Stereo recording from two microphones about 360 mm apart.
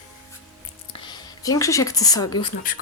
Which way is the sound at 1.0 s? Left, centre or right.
Centre.